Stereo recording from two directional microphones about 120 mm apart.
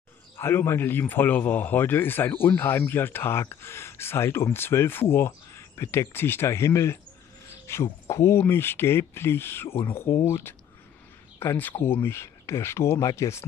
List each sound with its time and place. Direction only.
0.4 s a man's voice: 20° left (ahead or behind)